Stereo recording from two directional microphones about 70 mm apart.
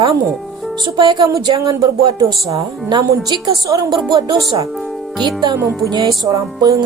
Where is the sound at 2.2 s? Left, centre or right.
Right.